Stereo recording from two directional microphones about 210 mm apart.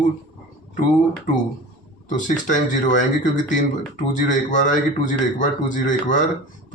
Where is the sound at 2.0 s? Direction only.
35° left (ahead or behind).